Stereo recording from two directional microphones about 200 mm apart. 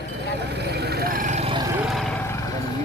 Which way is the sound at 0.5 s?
55° right (ahead or behind).